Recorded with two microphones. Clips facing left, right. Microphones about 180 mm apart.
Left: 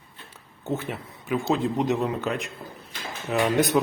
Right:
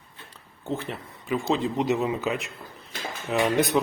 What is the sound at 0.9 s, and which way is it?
Speech, centre (ahead or behind).